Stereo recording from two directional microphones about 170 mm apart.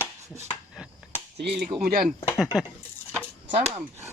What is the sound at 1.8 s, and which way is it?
Speech, 60° right (ahead or behind).